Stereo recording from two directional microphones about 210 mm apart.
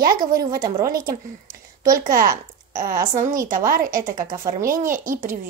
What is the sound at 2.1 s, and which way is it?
Speech, 15° right (ahead or behind).